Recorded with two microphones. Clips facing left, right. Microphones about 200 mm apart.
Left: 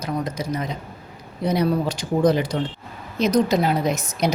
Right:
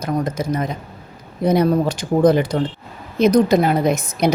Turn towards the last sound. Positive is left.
turn(degrees=-55)  # may be behind; listen again after turning